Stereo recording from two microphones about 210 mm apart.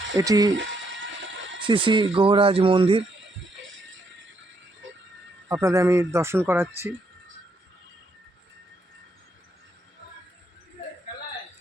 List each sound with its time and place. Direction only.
0.2 s speech: 20° right (ahead or behind)
1.6 s speech: 25° right (ahead or behind)
5.5 s speech: 15° right (ahead or behind)